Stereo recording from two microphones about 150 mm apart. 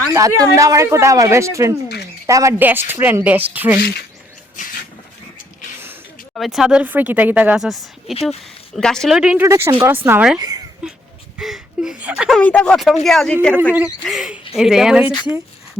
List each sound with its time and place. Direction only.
0.1 s speech: 20° right (ahead or behind)
4.6 s a sound: 55° left (ahead or behind)
6.3 s speech: centre (ahead or behind)
9.4 s speech: 15° right (ahead or behind)
10.3 s speech: 25° right (ahead or behind)
10.8 s a sound: 5° right (ahead or behind)
11.3 s speech: 5° right (ahead or behind)
12.4 s speech: 10° left (ahead or behind)
15.1 s speech: 25° left (ahead or behind)